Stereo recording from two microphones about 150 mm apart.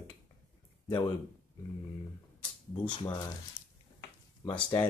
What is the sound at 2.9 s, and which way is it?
Speech, 25° left (ahead or behind).